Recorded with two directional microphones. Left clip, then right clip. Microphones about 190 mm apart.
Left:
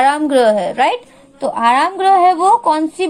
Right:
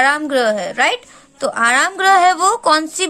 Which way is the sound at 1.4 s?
30° right (ahead or behind).